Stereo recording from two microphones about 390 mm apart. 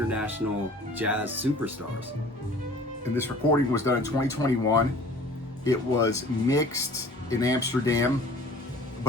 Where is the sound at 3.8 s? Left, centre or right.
Centre.